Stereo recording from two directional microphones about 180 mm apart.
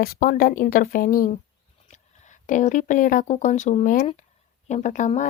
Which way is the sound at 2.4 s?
45° left (ahead or behind).